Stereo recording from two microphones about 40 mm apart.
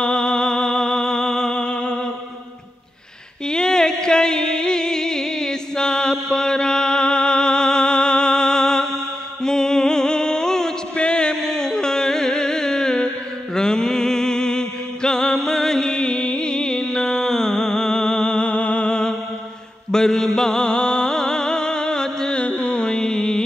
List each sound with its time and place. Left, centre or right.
0.0 s music: centre
1.6 s a sound: left
3.4 s music: centre
11.0 s carnatic music: left
13.6 s mantra: centre
19.9 s music: centre
22.4 s music: left